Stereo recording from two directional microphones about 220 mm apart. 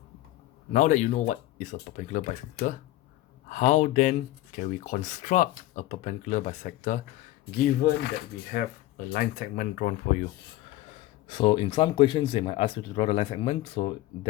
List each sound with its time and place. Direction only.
0.7 s speech: 35° left (ahead or behind)
11.3 s speech: 25° left (ahead or behind)